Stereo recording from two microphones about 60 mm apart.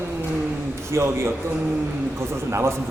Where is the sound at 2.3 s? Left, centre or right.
Right.